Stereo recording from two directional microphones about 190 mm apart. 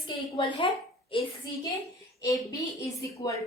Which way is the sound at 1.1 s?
25° left (ahead or behind).